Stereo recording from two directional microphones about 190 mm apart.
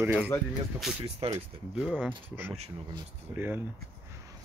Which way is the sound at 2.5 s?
30° right (ahead or behind).